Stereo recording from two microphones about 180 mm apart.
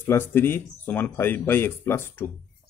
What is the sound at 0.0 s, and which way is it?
Speech, 15° left (ahead or behind).